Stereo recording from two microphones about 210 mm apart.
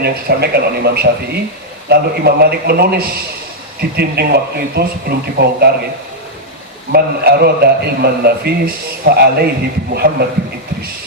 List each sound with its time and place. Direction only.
0.0 s a man's voice: 50° right (ahead or behind)
6.9 s a man's voice: 50° right (ahead or behind)